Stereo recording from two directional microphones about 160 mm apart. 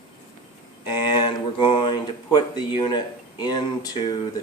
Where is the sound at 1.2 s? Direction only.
30° left (ahead or behind).